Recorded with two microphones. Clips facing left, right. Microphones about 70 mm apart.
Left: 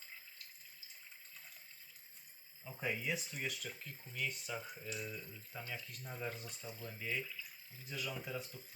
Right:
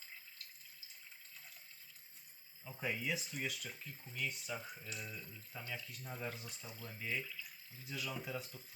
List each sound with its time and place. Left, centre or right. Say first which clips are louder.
2.6 s speech: even; centre